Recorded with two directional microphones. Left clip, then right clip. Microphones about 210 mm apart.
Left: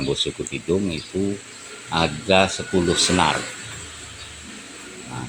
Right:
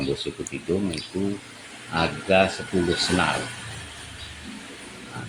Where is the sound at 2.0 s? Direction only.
40° left (ahead or behind).